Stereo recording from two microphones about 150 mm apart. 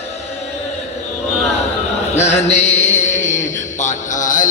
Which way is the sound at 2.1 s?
50° left (ahead or behind).